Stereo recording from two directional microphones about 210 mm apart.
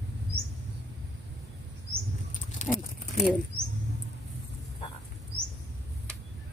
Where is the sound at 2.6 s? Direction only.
35° left (ahead or behind).